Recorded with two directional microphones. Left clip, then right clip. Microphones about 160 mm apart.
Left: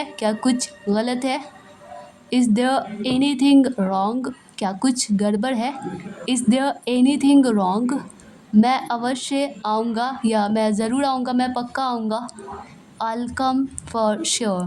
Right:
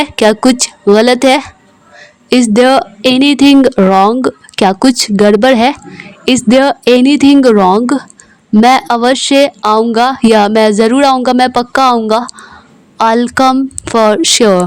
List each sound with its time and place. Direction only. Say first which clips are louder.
0.0 s a woman's voice: right 14 dB; 55° right (ahead or behind)